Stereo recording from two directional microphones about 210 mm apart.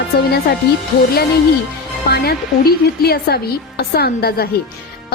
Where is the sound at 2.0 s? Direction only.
50° left (ahead or behind).